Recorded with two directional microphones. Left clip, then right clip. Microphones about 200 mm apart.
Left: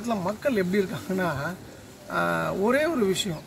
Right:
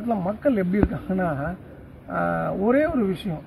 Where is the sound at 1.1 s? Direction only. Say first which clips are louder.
Right 2 dB; 20° left (ahead or behind).